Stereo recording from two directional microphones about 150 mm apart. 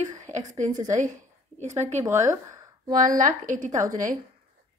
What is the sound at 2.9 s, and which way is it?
A woman's voice, 65° right (ahead or behind).